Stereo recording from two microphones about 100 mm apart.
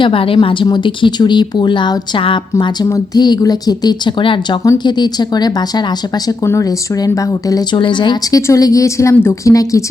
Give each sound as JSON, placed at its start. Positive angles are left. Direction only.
{"t": 0.0, "sound": "a woman's voice", "side_deg": 65}
{"t": 0.4, "sound": "speech", "side_deg": 50}
{"t": 3.2, "sound": "speech", "side_deg": 45}
{"t": 6.2, "sound": "speech", "side_deg": 30}
{"t": 7.8, "sound": "speech", "side_deg": 50}
{"t": 8.4, "sound": "speech", "side_deg": 30}